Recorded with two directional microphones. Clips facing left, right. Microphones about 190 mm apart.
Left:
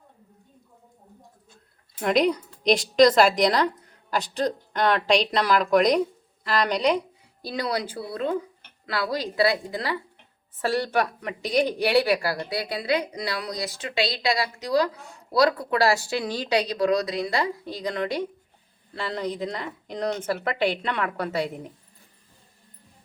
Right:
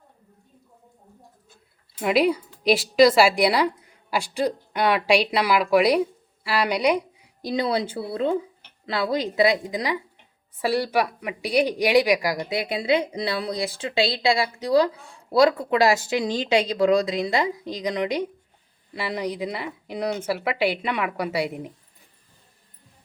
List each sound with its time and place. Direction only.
2.0 s a woman's voice: 5° right (ahead or behind)
7.4 s a woman's voice: 20° right (ahead or behind)